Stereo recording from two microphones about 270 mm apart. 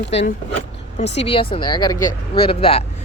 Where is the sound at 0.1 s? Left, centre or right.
Left.